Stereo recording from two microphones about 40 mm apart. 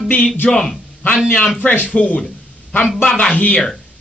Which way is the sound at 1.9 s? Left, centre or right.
Left.